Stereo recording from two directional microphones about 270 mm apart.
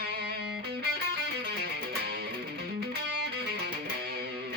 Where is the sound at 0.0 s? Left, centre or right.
Right.